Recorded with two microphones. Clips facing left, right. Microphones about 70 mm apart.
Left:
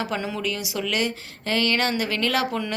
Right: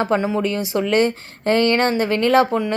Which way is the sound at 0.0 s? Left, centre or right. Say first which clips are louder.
Right 8 dB; right.